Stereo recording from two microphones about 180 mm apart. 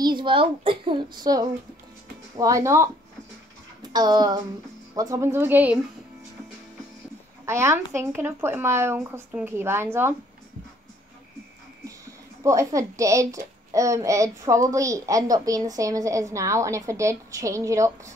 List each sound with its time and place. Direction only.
0.0 s a child's voice: 25° right (ahead or behind)
3.9 s a child's voice: 25° right (ahead or behind)
7.4 s a child's voice: 15° right (ahead or behind)
12.4 s a child's voice: 15° right (ahead or behind)